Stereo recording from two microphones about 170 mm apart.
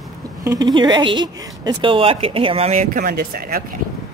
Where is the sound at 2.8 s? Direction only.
55° right (ahead or behind).